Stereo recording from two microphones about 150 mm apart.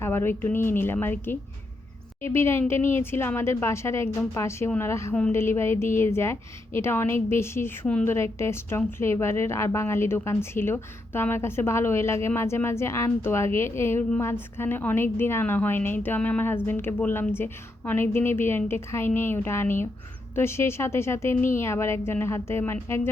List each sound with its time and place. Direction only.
0.0 s a woman's voice: 15° left (ahead or behind)